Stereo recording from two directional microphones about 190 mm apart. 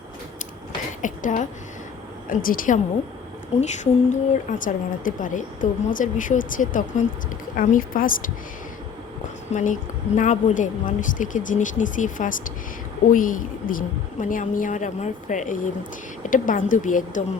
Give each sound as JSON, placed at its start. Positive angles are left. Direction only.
{"t": 1.0, "sound": "a woman's voice", "side_deg": 45}
{"t": 4.1, "sound": "a woman's voice", "side_deg": 45}
{"t": 9.5, "sound": "a woman's voice", "side_deg": 40}